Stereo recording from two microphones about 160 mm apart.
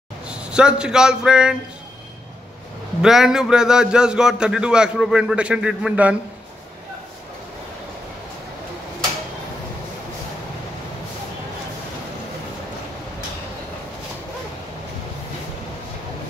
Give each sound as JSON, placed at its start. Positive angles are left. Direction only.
{"t": 0.3, "sound": "a man's voice", "side_deg": -5}
{"t": 3.0, "sound": "a man's voice", "side_deg": -5}